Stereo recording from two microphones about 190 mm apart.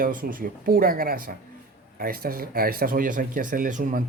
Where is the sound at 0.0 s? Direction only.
45° right (ahead or behind).